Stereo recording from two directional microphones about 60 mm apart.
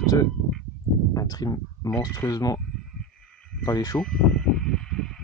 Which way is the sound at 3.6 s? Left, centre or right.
Left.